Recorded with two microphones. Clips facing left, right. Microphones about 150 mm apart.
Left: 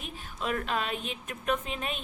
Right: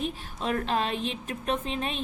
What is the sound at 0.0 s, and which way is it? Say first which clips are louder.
A woman's voice: right 5 dB; 35° right (ahead or behind).